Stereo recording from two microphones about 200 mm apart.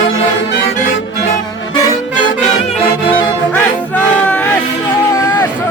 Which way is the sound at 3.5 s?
5° left (ahead or behind).